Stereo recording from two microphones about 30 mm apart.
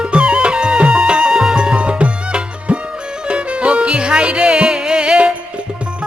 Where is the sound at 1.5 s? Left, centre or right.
Right.